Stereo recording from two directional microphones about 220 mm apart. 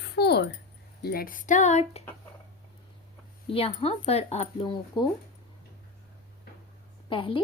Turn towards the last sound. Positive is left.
turn(degrees=25)  # may be behind; listen again after turning